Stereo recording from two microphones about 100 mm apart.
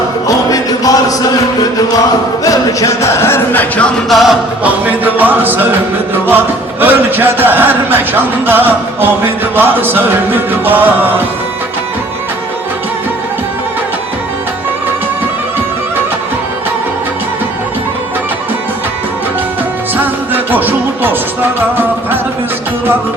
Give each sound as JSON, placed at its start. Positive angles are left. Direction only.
{"t": 0.3, "sound": "music", "side_deg": 40}
{"t": 2.4, "sound": "music", "side_deg": 35}
{"t": 4.1, "sound": "music", "side_deg": 0}
{"t": 4.6, "sound": "a sound", "side_deg": -15}
{"t": 20.0, "sound": "music", "side_deg": -20}